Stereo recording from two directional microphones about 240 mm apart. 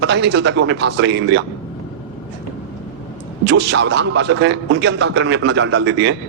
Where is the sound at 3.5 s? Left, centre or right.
Right.